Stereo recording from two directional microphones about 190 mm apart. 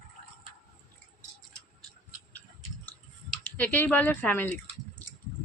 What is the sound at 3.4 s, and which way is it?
Speech, 10° left (ahead or behind).